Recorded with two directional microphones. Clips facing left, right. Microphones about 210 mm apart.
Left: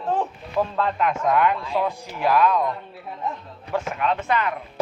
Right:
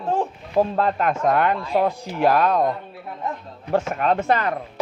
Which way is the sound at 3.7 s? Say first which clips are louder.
Right 4 dB; 45° right (ahead or behind).